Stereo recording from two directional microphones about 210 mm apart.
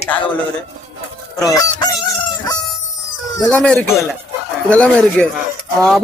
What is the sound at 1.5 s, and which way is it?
Fowl, 20° left (ahead or behind).